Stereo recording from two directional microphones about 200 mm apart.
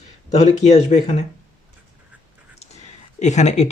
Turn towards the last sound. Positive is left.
turn(degrees=35)  # may be behind; listen again after turning